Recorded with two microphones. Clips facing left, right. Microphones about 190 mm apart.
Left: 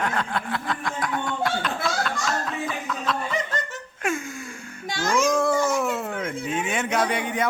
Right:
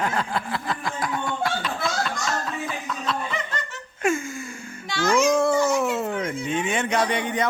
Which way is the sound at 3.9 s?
Centre (ahead or behind).